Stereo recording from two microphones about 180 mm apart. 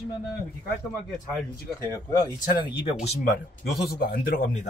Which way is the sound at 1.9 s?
20° left (ahead or behind).